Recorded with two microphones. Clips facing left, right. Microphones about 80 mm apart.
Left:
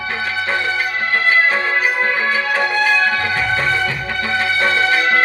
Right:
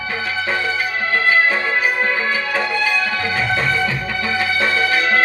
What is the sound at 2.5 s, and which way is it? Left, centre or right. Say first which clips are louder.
Music: left 5 dB; left.